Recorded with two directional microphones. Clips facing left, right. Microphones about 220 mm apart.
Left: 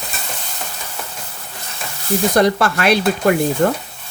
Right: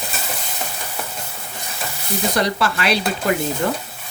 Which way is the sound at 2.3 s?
50° left (ahead or behind).